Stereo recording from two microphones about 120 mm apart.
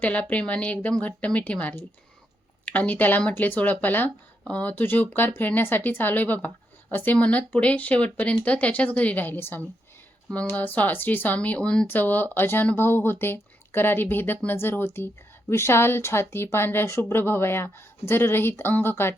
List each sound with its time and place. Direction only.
0.0 s speech: 10° left (ahead or behind)